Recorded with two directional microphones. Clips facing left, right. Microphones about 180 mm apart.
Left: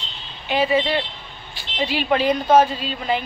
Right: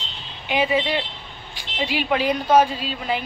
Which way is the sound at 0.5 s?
15° right (ahead or behind).